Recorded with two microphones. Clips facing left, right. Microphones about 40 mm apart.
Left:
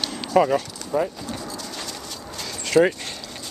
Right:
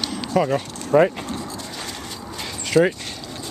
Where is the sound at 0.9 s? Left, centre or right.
Right.